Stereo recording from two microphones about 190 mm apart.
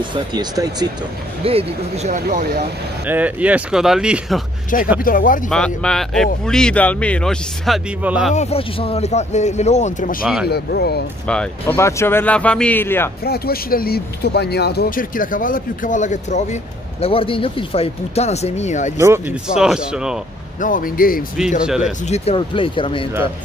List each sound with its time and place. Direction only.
0.0 s speech: 25° right (ahead or behind)
2.2 s speech: 55° right (ahead or behind)
3.1 s speech: 10° right (ahead or behind)
4.7 s speech: 45° left (ahead or behind)
5.5 s speech: 5° left (ahead or behind)
8.4 s speech: 30° left (ahead or behind)
10.2 s speech: 5° right (ahead or behind)
10.5 s speech: 55° left (ahead or behind)
11.2 s speech: 5° left (ahead or behind)
13.2 s speech: 55° left (ahead or behind); by 18.9 s 40° left (ahead or behind)
18.9 s speech: 15° right (ahead or behind)
20.6 s speech: 45° left (ahead or behind)
21.6 s speech: 5° right (ahead or behind)
22.0 s speech: 35° left (ahead or behind)